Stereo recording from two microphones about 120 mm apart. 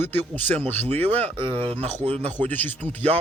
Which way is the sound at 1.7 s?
55° right (ahead or behind).